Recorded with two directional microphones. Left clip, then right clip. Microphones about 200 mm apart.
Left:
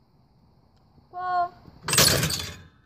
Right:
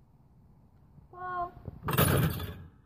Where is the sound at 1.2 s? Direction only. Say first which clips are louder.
Left 10 dB; 20° right (ahead or behind).